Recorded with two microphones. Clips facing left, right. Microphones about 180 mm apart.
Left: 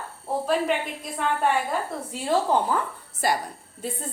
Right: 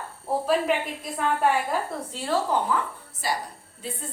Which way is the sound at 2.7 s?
35° left (ahead or behind).